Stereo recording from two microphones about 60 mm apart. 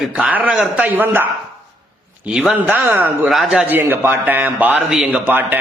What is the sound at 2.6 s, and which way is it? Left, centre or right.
Speech, right.